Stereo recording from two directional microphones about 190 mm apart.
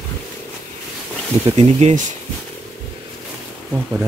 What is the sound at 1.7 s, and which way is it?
Speech, 35° right (ahead or behind).